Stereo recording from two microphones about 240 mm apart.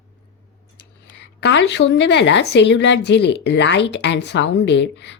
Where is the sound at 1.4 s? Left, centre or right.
Left.